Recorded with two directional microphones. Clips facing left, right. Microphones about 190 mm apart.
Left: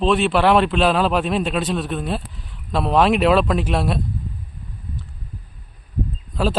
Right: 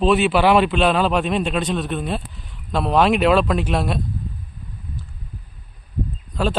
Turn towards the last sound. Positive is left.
turn(degrees=0)  # may be behind; listen again after turning